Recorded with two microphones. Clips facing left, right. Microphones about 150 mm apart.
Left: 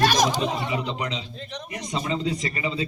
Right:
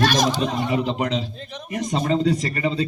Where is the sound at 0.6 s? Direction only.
45° right (ahead or behind).